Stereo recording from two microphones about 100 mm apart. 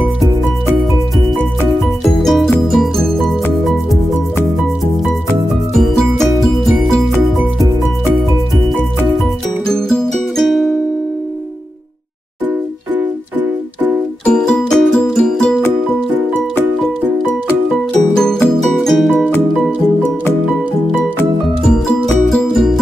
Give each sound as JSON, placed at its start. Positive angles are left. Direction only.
{"t": 2.1, "sound": "music", "side_deg": 0}
{"t": 5.8, "sound": "music", "side_deg": 5}
{"t": 9.7, "sound": "music", "side_deg": 5}
{"t": 12.9, "sound": "music", "side_deg": -15}
{"t": 14.2, "sound": "music", "side_deg": 10}
{"t": 18.1, "sound": "music", "side_deg": 5}
{"t": 21.6, "sound": "music", "side_deg": 5}